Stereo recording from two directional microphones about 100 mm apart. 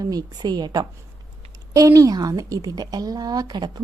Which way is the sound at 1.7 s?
35° right (ahead or behind).